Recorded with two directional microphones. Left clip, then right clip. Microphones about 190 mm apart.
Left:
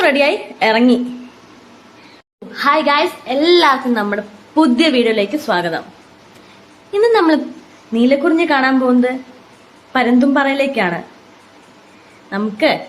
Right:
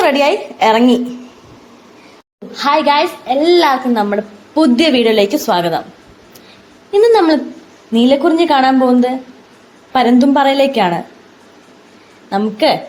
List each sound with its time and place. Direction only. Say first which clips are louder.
0.0 s a child's voice: right 1 dB; 5° right (ahead or behind)
2.5 s a child's voice: right 1 dB; 5° right (ahead or behind)
6.9 s a child's voice: right 3 dB; 10° right (ahead or behind)
12.3 s a child's voice: right 3 dB; 15° right (ahead or behind)